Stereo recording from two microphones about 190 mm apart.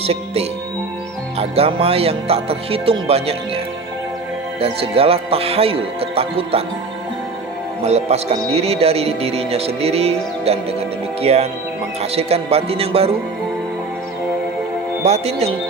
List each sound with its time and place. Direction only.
0.0 s speech: 30° right (ahead or behind)
1.4 s music: 30° right (ahead or behind)
4.6 s music: 30° right (ahead or behind)
7.8 s music: 35° right (ahead or behind)
15.0 s music: 35° right (ahead or behind)